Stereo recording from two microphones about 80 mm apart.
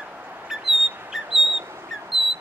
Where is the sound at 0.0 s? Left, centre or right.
Centre.